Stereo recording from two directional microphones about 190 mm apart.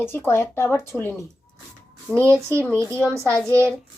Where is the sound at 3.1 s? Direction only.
15° right (ahead or behind).